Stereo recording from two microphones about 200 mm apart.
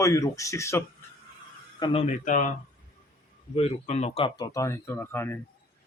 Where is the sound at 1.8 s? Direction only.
30° left (ahead or behind); by 5.4 s 10° left (ahead or behind).